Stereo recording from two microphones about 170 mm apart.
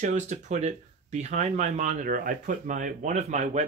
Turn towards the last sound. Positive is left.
turn(degrees=-45)  # may be behind; listen again after turning